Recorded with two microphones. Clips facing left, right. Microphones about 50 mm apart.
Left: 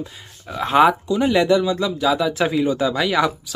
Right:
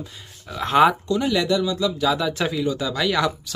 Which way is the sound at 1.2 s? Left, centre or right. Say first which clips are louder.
Left 6 dB; left.